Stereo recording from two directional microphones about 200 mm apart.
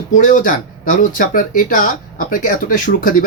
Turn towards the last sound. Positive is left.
turn(degrees=45)  # may be behind; listen again after turning